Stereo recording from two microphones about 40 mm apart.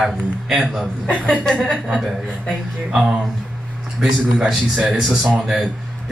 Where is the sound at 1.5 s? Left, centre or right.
Left.